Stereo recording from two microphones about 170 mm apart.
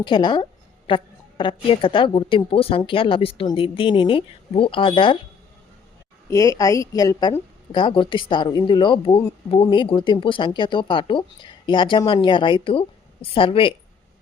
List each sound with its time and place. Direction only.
0.0 s a woman's voice: 25° left (ahead or behind)
6.3 s a woman's voice: 20° left (ahead or behind)